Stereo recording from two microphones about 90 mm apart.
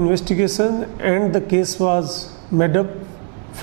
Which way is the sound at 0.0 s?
15° right (ahead or behind).